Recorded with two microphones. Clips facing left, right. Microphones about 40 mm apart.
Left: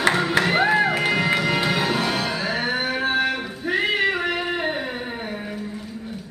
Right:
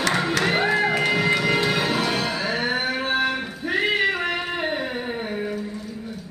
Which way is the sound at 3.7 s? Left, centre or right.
Centre.